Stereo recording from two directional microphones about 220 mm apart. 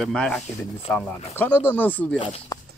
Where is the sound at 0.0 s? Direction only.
Centre (ahead or behind).